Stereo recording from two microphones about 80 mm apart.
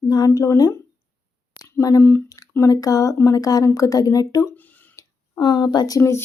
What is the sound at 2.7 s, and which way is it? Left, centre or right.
Speech, left.